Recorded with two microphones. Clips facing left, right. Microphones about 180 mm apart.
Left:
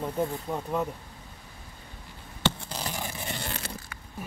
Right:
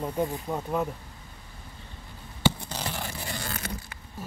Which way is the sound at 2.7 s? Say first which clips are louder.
Right 1 dB; 15° left (ahead or behind).